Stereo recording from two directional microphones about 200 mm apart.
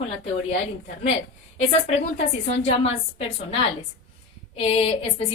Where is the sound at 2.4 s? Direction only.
30° left (ahead or behind).